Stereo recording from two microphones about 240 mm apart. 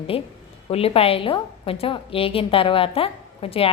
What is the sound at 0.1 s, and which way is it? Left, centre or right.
A woman's voice, left.